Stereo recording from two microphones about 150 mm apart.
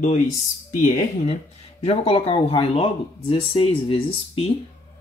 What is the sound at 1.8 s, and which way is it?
Speech, 40° left (ahead or behind).